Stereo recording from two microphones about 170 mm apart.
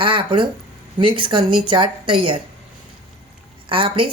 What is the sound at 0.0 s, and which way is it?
A woman's voice, 30° right (ahead or behind).